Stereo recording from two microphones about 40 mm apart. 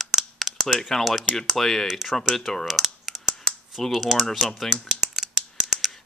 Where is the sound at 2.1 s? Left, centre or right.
Centre.